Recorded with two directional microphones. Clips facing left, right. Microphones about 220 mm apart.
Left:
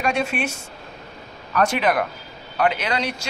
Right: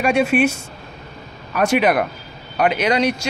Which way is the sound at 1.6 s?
10° right (ahead or behind).